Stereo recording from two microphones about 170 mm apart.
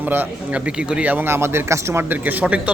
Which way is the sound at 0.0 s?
10° right (ahead or behind).